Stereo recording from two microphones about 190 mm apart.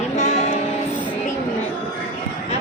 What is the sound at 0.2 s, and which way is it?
Music, 35° left (ahead or behind).